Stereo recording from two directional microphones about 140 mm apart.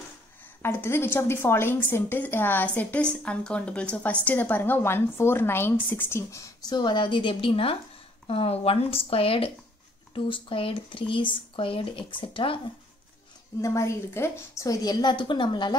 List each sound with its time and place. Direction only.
0.6 s a woman's voice: 15° left (ahead or behind); by 12.5 s 35° left (ahead or behind)
13.6 s a woman's voice: 20° left (ahead or behind)